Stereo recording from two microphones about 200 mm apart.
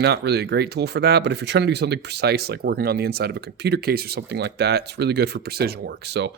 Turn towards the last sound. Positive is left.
turn(degrees=-60)  # may be behind; listen again after turning